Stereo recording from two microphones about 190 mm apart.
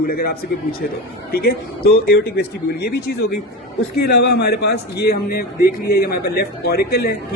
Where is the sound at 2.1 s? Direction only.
60° left (ahead or behind).